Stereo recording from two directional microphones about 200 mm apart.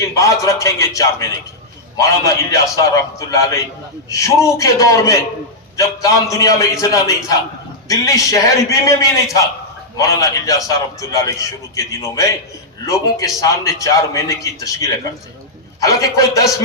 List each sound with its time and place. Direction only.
0.0 s a man's voice: 15° left (ahead or behind)